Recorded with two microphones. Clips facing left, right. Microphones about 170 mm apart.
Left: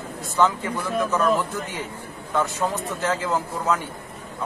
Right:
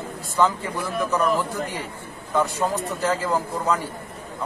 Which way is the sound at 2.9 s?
Centre (ahead or behind).